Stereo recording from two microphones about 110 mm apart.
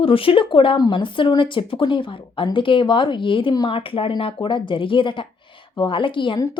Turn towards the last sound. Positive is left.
turn(degrees=50)  # may be behind; listen again after turning